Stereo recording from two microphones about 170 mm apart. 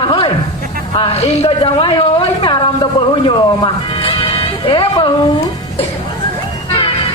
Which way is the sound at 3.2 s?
30° left (ahead or behind).